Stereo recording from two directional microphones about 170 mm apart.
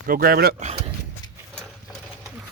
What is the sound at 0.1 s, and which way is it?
Speech, 60° right (ahead or behind).